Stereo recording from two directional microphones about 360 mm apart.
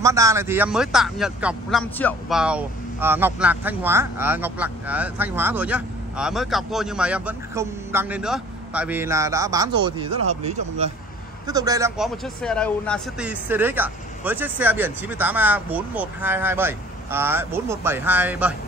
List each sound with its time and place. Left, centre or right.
0.0 s speech: centre
12.4 s speech: centre